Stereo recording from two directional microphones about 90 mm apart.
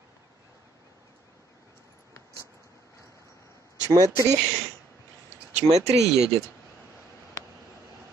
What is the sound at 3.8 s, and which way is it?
Speech, 40° right (ahead or behind).